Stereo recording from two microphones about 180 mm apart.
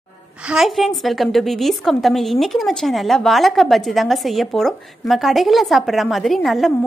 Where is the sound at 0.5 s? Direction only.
Centre (ahead or behind).